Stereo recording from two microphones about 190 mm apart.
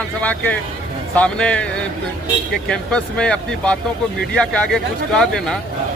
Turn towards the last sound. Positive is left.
turn(degrees=0)  # may be behind; listen again after turning